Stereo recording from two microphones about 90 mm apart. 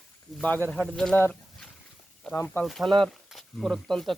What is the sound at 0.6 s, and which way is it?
Speech, 5° left (ahead or behind).